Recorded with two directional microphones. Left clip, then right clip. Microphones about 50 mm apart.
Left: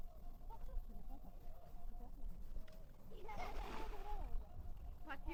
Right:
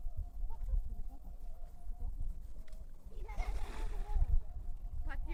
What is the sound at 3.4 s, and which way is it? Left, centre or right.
Splash, right.